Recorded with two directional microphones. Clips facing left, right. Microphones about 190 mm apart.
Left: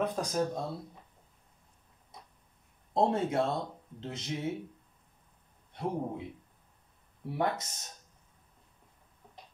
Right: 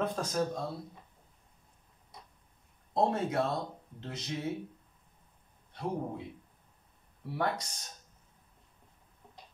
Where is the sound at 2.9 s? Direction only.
25° left (ahead or behind).